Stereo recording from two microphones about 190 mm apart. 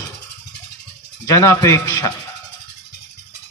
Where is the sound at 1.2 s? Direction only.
15° left (ahead or behind).